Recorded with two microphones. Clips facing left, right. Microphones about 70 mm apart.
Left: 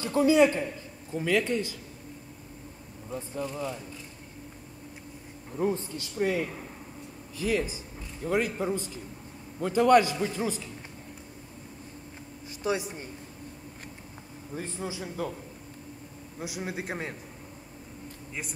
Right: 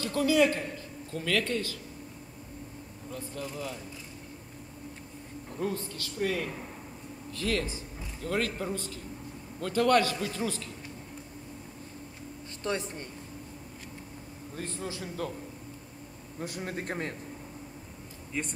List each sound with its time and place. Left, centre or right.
0.0 s a man's voice: left
3.1 s speech: centre
3.5 s a man's voice: centre
5.6 s a man's voice: left
12.6 s a man's voice: centre
14.5 s a man's voice: centre
16.3 s a man's voice: centre
18.3 s a man's voice: centre